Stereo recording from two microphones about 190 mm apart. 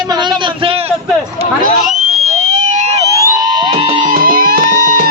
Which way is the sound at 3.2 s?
20° right (ahead or behind).